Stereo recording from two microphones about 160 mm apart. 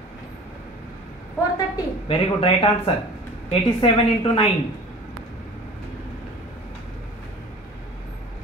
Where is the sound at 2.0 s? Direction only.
35° left (ahead or behind).